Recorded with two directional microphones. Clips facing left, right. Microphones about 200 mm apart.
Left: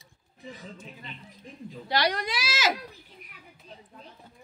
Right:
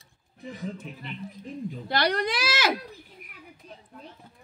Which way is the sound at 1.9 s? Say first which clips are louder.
Right 2 dB; 55° right (ahead or behind).